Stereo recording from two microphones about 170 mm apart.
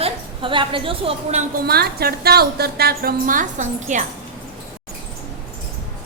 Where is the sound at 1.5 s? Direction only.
65° right (ahead or behind); by 4.0 s 45° right (ahead or behind).